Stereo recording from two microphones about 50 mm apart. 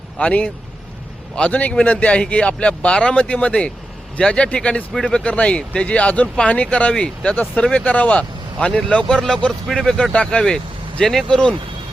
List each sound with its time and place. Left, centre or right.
0.2 s speech: left
10.4 s vehicle: centre
11.3 s speech: centre